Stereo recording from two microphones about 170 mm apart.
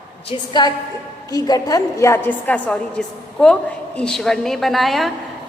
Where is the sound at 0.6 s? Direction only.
25° left (ahead or behind).